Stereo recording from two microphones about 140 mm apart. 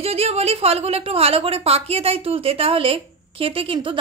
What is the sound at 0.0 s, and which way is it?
A woman's voice, 45° right (ahead or behind).